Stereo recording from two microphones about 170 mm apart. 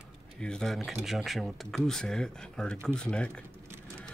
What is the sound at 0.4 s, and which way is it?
Speech, 5° left (ahead or behind).